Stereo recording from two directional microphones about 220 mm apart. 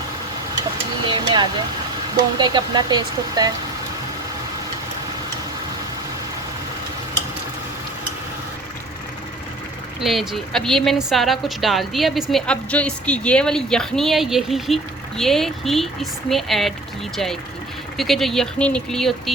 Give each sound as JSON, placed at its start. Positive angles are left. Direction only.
{"t": 1.0, "sound": "a sound", "side_deg": -20}
{"t": 2.4, "sound": "speech", "side_deg": -20}
{"t": 10.0, "sound": "a woman's voice", "side_deg": 0}
{"t": 17.9, "sound": "a woman's voice", "side_deg": 0}